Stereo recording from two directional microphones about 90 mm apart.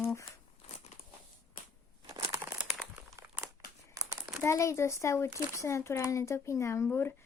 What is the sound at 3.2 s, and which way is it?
Crumpling, 35° right (ahead or behind).